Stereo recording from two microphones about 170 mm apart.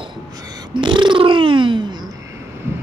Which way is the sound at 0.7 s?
30° right (ahead or behind).